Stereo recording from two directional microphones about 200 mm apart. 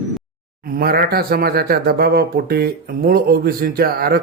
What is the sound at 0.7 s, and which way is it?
Speech, 50° right (ahead or behind).